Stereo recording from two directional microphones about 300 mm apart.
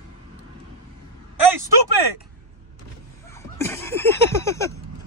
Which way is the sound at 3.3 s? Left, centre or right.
Centre.